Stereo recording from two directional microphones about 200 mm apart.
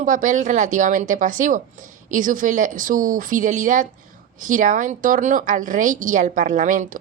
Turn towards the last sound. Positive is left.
turn(degrees=-40)  # may be behind; listen again after turning